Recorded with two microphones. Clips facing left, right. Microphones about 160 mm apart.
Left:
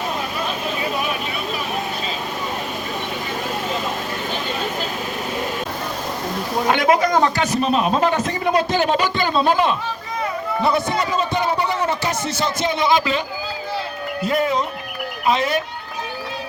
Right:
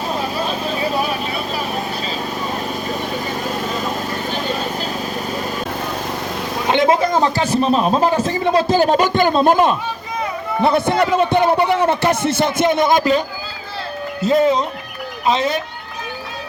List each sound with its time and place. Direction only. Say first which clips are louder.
0.2 s vehicle: right 3 dB; 30° right (ahead or behind)
6.7 s a sound: right 2 dB; 25° right (ahead or behind)
8.7 s a man's voice: right 5 dB; 40° right (ahead or behind)
14.2 s speech: right 5 dB; 20° right (ahead or behind)